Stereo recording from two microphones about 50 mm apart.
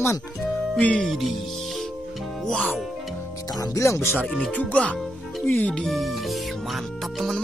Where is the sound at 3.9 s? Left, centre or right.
Left.